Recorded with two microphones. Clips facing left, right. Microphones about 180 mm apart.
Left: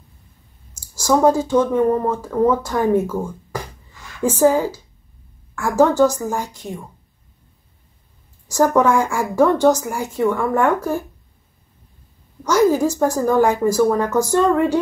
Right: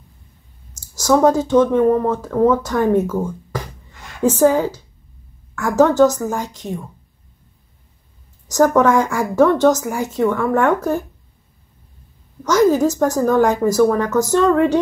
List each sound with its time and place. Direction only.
0.7 s speech: 10° left (ahead or behind)
4.2 s speech: 10° left (ahead or behind)
8.5 s speech: 10° left (ahead or behind)
12.4 s speech: 10° left (ahead or behind)